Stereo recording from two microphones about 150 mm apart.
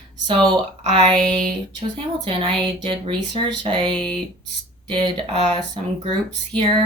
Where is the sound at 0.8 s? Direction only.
35° right (ahead or behind).